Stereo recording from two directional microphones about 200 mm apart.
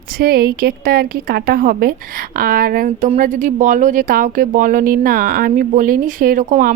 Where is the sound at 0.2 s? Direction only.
50° right (ahead or behind).